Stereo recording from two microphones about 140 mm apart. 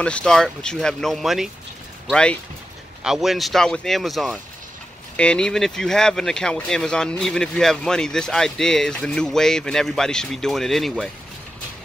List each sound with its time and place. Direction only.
0.0 s speech: 5° left (ahead or behind)
3.0 s speech: 5° right (ahead or behind)